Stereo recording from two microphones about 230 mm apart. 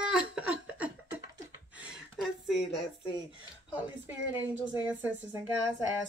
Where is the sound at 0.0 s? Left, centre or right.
Centre.